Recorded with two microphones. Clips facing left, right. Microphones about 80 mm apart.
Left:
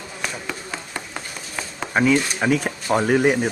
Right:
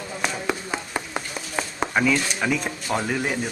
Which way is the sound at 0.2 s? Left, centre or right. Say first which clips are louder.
Right 4 dB; centre.